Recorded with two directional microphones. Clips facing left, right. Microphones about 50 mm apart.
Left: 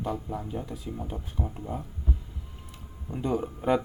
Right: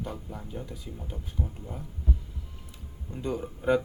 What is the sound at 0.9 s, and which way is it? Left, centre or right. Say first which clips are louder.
Speech: left 6 dB; left.